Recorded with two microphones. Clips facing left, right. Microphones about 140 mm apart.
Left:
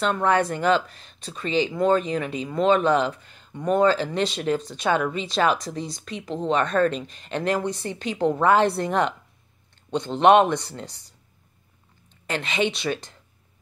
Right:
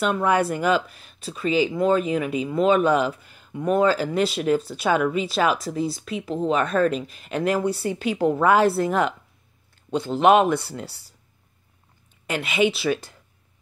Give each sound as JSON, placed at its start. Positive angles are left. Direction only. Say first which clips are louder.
{"t": 0.0, "sound": "speech", "louder": "right 1 dB", "side_deg": -10}
{"t": 12.3, "sound": "speech", "louder": "right 3 dB", "side_deg": -10}